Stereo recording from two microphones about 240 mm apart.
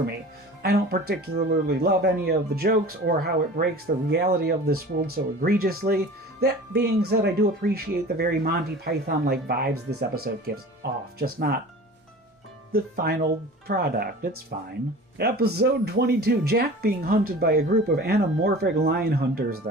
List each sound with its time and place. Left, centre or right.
0.6 s speech: right
12.7 s speech: right